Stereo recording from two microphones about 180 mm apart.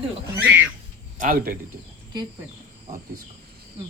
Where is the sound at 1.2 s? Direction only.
50° right (ahead or behind).